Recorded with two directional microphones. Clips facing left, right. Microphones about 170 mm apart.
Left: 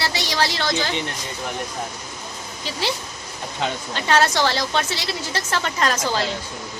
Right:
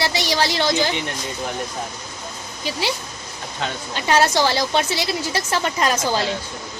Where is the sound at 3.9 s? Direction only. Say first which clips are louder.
Right 2 dB; 10° right (ahead or behind).